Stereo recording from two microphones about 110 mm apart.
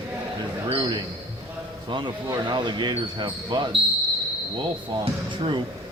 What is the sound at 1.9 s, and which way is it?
Speech, 45° right (ahead or behind).